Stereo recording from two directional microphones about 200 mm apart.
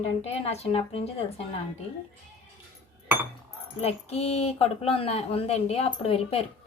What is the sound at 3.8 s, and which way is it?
A woman's voice, 30° left (ahead or behind).